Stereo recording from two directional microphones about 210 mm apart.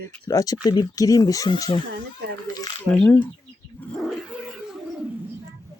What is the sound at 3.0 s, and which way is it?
Speech, 5° left (ahead or behind).